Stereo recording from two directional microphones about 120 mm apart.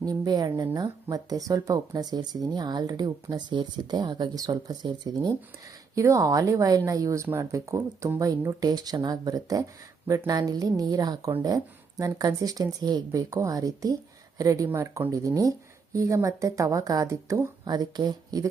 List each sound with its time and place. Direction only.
0.0 s speech: 35° right (ahead or behind)